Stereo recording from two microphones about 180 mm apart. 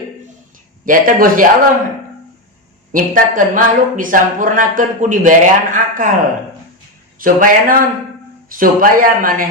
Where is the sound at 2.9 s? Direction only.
50° right (ahead or behind).